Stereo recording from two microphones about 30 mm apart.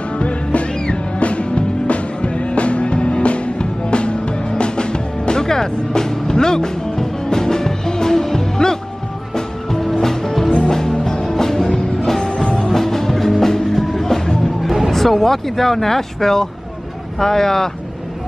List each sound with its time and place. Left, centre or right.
0.2 s music: left; by 14.3 s centre
14.9 s speech: centre